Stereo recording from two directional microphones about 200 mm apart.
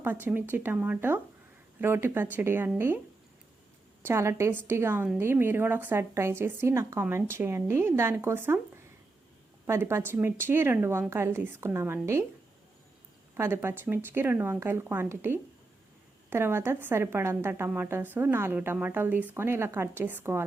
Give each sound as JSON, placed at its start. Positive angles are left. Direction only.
{"t": 0.0, "sound": "a woman's voice", "side_deg": -10}
{"t": 4.0, "sound": "a woman's voice", "side_deg": -15}
{"t": 13.3, "sound": "a woman's voice", "side_deg": -10}